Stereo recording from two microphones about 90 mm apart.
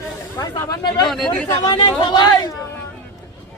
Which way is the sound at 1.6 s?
65° left (ahead or behind).